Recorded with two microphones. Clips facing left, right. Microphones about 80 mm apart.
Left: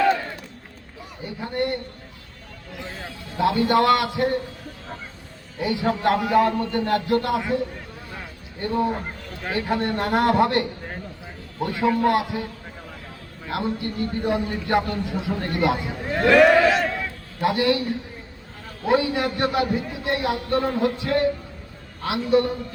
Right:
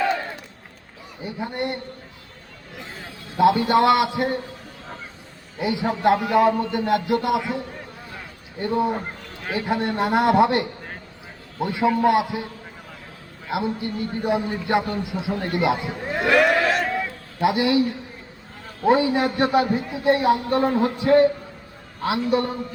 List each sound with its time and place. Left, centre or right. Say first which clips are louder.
1.2 s a man's voice: left 1 dB; centre
3.3 s a man's voice: right 2 dB; centre
5.5 s a man's voice: even; centre
8.6 s a man's voice: right 1 dB; centre
13.5 s a man's voice: right 1 dB; centre
16.3 s a sound: left 4 dB; centre
16.9 s a sound: right 3 dB; centre
18.9 s a man's voice: right 3 dB; right